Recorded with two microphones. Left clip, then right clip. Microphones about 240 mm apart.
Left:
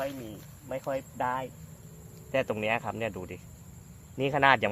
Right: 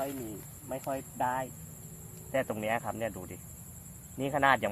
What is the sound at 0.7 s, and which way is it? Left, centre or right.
Speech, left.